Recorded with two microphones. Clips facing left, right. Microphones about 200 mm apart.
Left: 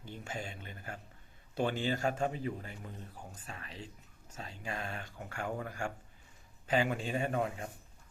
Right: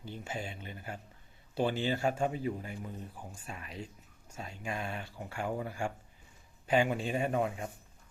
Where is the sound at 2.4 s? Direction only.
10° right (ahead or behind).